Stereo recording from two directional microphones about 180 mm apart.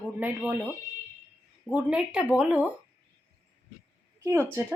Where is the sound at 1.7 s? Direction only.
5° right (ahead or behind).